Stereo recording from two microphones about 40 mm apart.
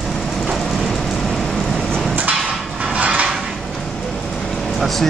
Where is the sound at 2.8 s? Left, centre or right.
Right.